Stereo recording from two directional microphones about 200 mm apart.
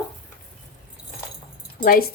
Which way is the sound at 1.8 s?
45° left (ahead or behind).